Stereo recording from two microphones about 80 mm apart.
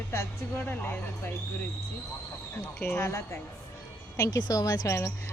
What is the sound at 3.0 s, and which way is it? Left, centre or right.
Speech, left.